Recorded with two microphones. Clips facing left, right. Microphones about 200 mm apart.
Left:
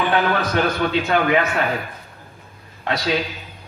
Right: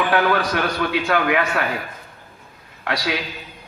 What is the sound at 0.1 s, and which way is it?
A man's voice, 25° left (ahead or behind).